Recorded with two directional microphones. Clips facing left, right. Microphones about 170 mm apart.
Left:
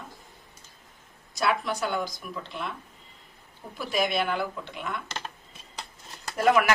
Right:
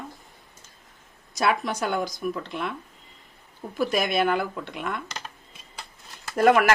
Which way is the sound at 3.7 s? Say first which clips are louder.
Right 3 dB; 50° right (ahead or behind).